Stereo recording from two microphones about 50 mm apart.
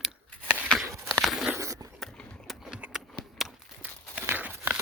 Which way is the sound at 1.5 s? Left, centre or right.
Right.